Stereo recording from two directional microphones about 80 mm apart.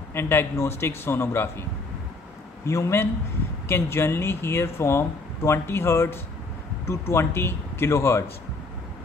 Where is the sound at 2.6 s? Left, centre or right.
Left.